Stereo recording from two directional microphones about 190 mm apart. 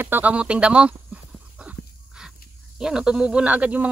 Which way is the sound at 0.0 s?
10° right (ahead or behind).